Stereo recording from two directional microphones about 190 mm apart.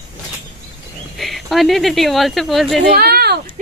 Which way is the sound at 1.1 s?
Centre (ahead or behind).